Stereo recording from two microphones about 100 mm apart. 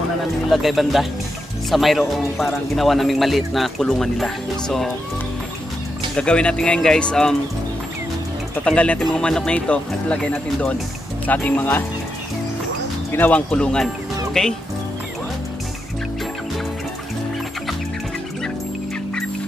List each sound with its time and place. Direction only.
0.5 s speech: centre (ahead or behind)
6.1 s speech: 10° left (ahead or behind)
8.6 s speech: 10° left (ahead or behind)
13.1 s speech: 15° left (ahead or behind)